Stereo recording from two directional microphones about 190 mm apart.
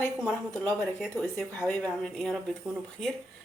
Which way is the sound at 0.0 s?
5° left (ahead or behind).